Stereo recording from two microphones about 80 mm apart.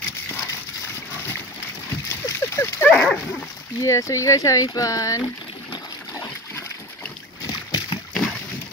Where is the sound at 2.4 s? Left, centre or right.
Left.